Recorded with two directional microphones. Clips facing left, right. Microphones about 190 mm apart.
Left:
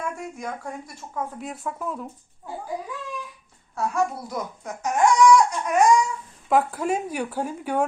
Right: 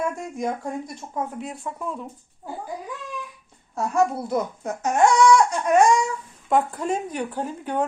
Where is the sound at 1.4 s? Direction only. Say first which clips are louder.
Even; centre (ahead or behind).